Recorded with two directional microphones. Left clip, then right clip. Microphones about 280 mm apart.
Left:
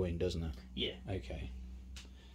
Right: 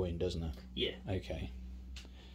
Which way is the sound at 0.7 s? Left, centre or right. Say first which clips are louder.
Right 2 dB; centre.